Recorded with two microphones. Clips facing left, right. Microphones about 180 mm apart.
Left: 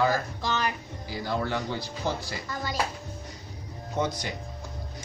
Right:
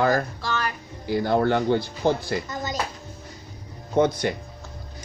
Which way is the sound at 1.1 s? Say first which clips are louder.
Right 9 dB; 60° right (ahead or behind).